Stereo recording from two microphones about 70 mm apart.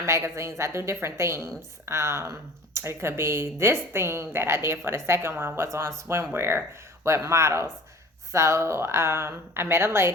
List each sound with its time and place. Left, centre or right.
0.0 s speech: right